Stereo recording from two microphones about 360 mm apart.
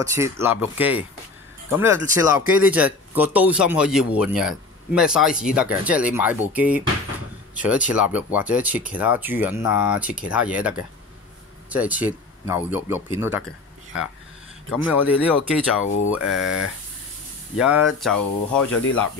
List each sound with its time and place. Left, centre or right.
0.0 s speech: centre
7.9 s speech: centre
14.7 s speech: centre
17.6 s speech: centre
18.7 s speech: left